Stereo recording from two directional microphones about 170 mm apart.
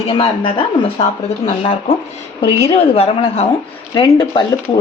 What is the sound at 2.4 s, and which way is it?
Speech, 35° left (ahead or behind).